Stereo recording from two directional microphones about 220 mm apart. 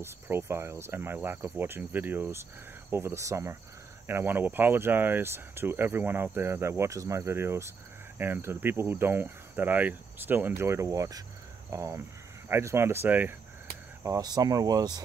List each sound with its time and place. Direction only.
0.0 s speech: 10° right (ahead or behind)